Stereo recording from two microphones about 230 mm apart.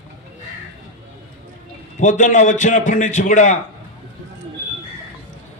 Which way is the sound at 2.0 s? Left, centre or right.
Left.